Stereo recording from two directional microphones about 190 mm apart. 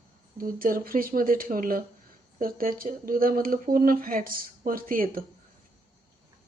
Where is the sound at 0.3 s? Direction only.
50° right (ahead or behind).